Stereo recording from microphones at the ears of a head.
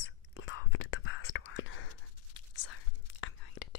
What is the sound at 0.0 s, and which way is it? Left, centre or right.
Whispering, left.